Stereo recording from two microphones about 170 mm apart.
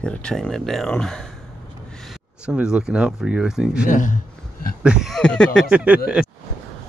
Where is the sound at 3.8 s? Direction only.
50° left (ahead or behind).